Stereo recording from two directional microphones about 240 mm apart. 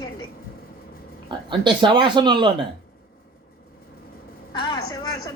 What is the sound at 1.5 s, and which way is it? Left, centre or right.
Speech, centre.